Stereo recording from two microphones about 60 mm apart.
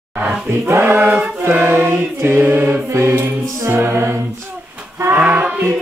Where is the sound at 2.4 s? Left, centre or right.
Right.